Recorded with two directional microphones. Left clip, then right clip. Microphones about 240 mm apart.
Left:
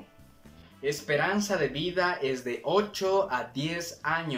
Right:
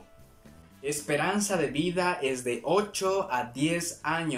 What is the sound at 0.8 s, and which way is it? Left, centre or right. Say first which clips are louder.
Speech: left 1 dB; centre.